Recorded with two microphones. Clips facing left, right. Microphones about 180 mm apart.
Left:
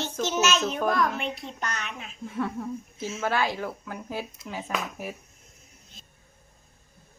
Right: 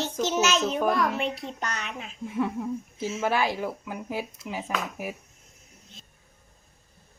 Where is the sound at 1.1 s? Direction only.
35° right (ahead or behind).